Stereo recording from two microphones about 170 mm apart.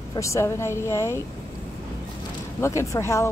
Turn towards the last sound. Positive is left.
turn(degrees=15)  # may be behind; listen again after turning